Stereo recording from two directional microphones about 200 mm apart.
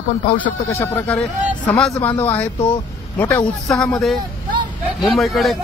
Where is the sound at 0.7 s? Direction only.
10° left (ahead or behind).